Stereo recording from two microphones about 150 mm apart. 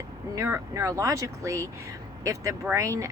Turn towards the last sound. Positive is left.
turn(degrees=-20)  # may be behind; listen again after turning